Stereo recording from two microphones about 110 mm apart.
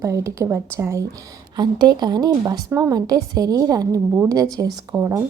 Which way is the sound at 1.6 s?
40° right (ahead or behind).